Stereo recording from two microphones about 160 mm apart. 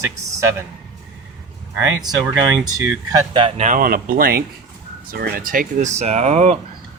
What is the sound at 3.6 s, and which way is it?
Speech, 60° right (ahead or behind).